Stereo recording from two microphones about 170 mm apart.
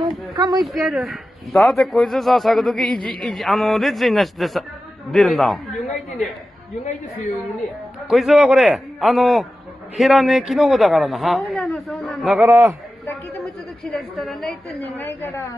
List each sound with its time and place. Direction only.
0.0 s speech: 25° right (ahead or behind)
0.6 s speech: centre (ahead or behind)
8.1 s speech: centre (ahead or behind)
14.1 s a woman's voice: centre (ahead or behind); by 15.5 s 20° left (ahead or behind)